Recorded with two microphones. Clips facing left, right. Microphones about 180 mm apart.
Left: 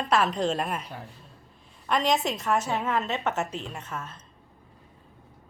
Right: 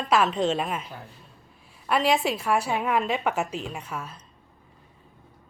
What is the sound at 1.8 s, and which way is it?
A woman's voice, 5° right (ahead or behind).